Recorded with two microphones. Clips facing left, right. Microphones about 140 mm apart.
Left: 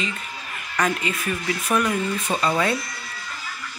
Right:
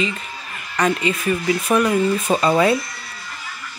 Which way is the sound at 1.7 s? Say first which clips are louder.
Right 5 dB; 25° right (ahead or behind).